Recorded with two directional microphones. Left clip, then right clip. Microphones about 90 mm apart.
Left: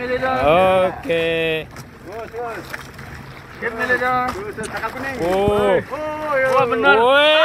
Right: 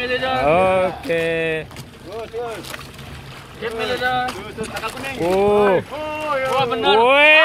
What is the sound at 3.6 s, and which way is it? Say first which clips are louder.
Speech: left 3 dB; 20° right (ahead or behind).